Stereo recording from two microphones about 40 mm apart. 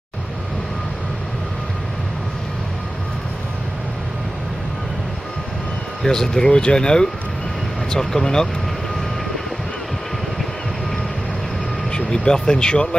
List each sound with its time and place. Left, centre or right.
6.3 s speech: centre
11.9 s speech: centre